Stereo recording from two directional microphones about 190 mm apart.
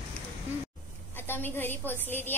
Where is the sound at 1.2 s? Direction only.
10° left (ahead or behind).